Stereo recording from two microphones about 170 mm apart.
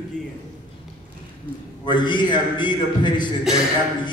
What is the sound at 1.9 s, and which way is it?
A man's voice, 25° left (ahead or behind).